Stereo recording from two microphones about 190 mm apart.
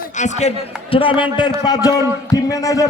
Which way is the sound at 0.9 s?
25° left (ahead or behind).